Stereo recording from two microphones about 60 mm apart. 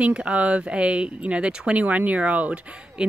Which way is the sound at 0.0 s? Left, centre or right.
Centre.